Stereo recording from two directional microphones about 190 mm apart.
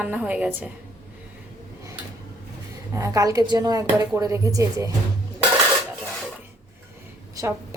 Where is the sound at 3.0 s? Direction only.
20° right (ahead or behind).